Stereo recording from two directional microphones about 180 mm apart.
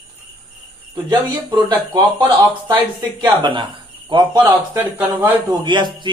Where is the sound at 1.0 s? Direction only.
25° right (ahead or behind).